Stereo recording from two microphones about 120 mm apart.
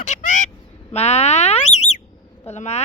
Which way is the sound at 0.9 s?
65° left (ahead or behind).